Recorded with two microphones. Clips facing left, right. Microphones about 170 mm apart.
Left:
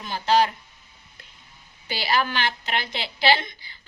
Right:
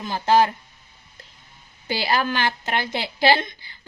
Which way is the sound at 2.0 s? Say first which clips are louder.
Right 1 dB; 45° right (ahead or behind).